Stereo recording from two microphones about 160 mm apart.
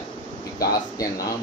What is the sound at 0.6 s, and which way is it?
Speech, 20° left (ahead or behind).